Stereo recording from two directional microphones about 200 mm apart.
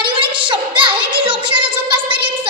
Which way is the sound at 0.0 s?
25° right (ahead or behind).